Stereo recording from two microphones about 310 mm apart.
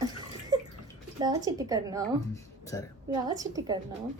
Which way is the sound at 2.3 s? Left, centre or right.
Centre.